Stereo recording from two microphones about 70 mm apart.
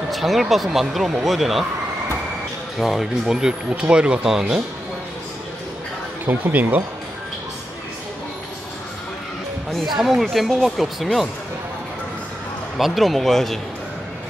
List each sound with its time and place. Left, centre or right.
0.1 s speech: centre
2.8 s speech: centre
6.2 s speech: right
9.9 s speech: centre
12.7 s speech: centre